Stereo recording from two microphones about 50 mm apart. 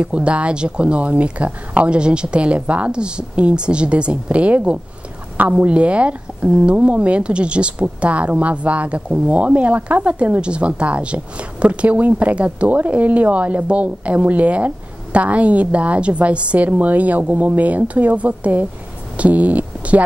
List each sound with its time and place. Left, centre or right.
0.0 s speech: right